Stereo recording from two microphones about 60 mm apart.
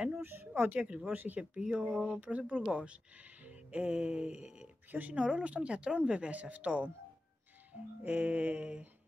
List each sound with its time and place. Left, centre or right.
0.2 s speech: right
0.6 s speech: right
3.4 s music: right
4.9 s speech: right
8.0 s speech: right